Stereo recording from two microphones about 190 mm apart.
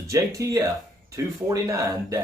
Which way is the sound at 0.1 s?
15° right (ahead or behind).